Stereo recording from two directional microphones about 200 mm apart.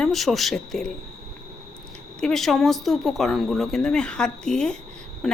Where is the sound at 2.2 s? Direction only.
Centre (ahead or behind).